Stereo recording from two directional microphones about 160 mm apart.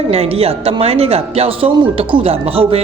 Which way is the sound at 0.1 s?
40° right (ahead or behind).